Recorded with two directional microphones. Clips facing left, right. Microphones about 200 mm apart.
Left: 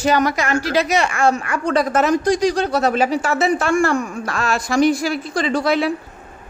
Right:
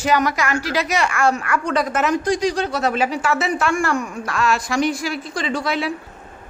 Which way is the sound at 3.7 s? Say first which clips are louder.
Left 4 dB; 30° left (ahead or behind).